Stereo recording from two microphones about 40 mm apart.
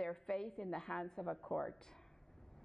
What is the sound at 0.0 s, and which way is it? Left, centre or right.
A woman's voice, centre.